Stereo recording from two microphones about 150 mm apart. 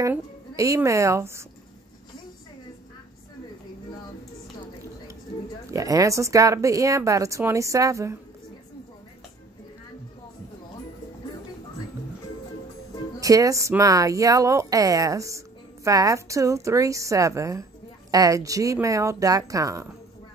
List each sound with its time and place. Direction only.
0.6 s a woman's voice: 20° right (ahead or behind)
5.7 s a woman's voice: 20° right (ahead or behind)
13.2 s a woman's voice: 20° right (ahead or behind)